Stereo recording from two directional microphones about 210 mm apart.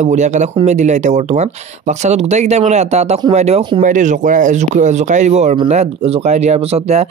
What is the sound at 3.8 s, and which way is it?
Speech, 35° right (ahead or behind).